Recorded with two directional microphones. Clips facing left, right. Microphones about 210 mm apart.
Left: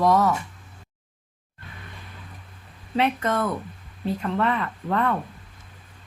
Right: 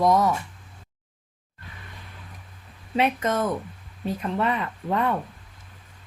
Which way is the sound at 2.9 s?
20° right (ahead or behind).